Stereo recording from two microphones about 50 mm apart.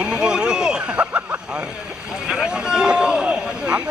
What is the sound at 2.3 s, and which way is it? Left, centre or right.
Speech, centre.